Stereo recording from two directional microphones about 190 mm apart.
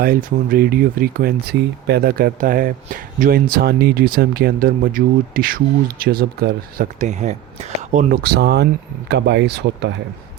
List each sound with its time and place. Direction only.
0.0 s speech: 50° right (ahead or behind); by 9.9 s 65° right (ahead or behind)